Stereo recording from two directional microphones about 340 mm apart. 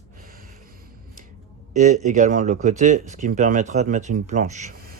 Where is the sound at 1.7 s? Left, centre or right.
Right.